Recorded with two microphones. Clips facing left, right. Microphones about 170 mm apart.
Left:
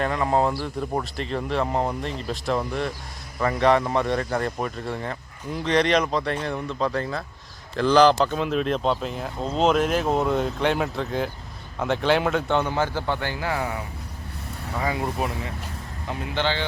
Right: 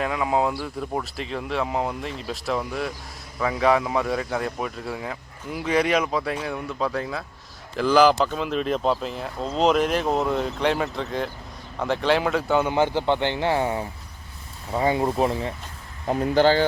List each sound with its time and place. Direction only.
0.0 s speech: 5° right (ahead or behind)
12.7 s speech: 20° right (ahead or behind)
16.0 s speech: 40° right (ahead or behind)